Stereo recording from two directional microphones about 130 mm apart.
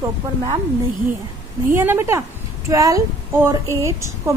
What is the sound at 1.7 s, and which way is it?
A woman's voice, 15° right (ahead or behind).